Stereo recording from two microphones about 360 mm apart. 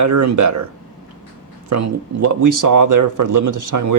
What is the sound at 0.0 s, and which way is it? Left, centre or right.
Speech, right.